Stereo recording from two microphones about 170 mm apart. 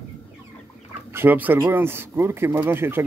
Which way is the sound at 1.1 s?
10° right (ahead or behind).